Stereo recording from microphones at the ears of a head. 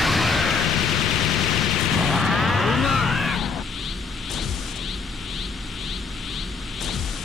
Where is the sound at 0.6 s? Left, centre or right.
Left.